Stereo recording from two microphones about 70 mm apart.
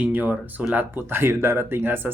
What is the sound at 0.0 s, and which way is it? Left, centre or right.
Speech, right.